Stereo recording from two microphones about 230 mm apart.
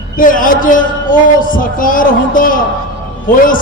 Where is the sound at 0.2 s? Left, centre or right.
Left.